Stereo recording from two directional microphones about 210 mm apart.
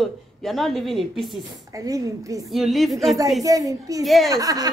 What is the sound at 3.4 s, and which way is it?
Speech, 15° right (ahead or behind).